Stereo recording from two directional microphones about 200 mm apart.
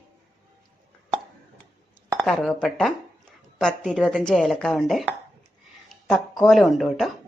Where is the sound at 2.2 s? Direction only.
Centre (ahead or behind).